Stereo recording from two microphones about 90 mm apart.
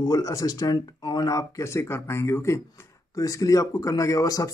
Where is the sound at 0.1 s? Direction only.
40° left (ahead or behind).